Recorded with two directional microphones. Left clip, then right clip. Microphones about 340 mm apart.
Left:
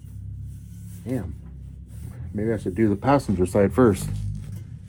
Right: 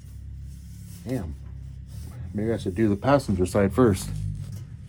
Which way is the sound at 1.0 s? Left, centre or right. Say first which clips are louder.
Left 1 dB; centre.